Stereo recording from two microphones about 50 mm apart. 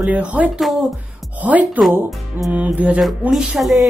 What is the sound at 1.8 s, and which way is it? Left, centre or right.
Speech, right.